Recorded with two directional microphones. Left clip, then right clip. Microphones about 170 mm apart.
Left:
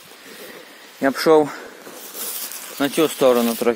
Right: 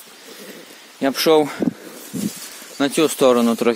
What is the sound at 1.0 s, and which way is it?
Speech, 25° right (ahead or behind).